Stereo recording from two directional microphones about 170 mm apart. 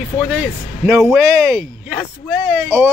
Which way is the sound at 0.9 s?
Centre (ahead or behind).